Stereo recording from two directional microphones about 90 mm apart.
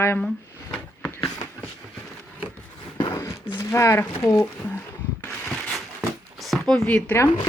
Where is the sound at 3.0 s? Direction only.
60° left (ahead or behind).